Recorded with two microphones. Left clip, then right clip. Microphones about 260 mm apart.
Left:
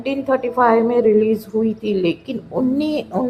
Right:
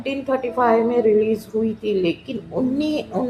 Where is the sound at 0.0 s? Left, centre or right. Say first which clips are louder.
Left 3 dB; left.